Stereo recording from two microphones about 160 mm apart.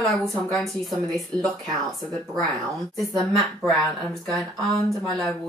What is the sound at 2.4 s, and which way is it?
Speech, 20° right (ahead or behind).